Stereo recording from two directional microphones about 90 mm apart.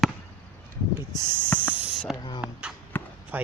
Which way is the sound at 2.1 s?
55° left (ahead or behind).